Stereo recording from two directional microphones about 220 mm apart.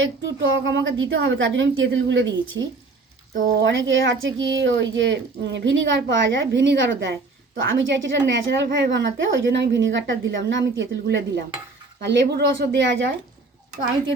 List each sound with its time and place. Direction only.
0.0 s a woman's voice: 55° right (ahead or behind)
3.6 s a woman's voice: 60° right (ahead or behind)